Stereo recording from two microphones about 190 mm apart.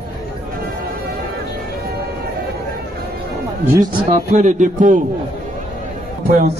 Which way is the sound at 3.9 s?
35° right (ahead or behind).